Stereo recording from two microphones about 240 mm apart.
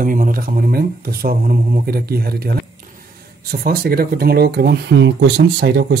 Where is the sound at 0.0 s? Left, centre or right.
Right.